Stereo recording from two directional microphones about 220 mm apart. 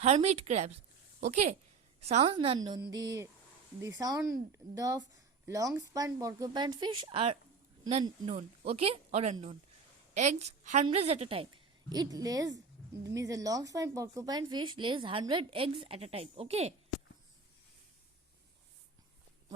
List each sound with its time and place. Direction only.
0.0 s a woman's voice: 30° right (ahead or behind)